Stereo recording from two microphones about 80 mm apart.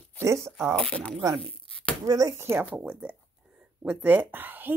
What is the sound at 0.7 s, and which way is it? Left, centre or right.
Speech, centre.